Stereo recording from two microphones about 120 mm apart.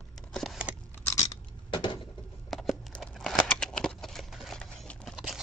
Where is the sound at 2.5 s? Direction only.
Centre (ahead or behind).